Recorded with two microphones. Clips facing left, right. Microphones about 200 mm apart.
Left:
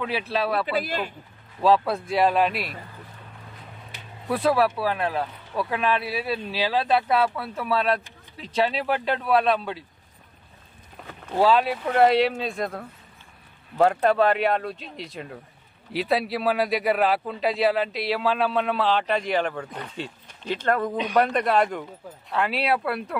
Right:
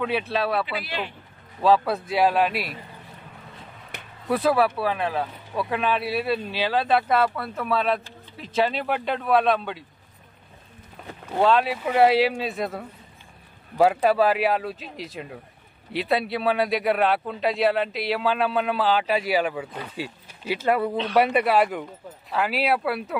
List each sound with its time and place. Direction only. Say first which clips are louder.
0.0 s speech: right 1 dB; centre (ahead or behind)
0.7 s speech: left 4 dB; 45° left (ahead or behind)
1.6 s speech: even; centre (ahead or behind)
4.3 s speech: right 1 dB; centre (ahead or behind)
11.0 s a sound: right 2 dB; centre (ahead or behind)
11.3 s speech: even; centre (ahead or behind)
20.9 s speech: right 1 dB; 15° left (ahead or behind)
21.2 s speech: right 1 dB; 5° right (ahead or behind)